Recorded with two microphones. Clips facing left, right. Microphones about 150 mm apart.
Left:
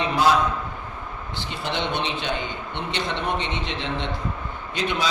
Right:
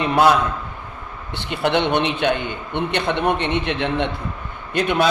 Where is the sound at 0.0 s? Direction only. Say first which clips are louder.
Right 4 dB; 60° right (ahead or behind).